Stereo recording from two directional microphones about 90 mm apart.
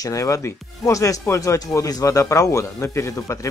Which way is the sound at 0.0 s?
35° left (ahead or behind).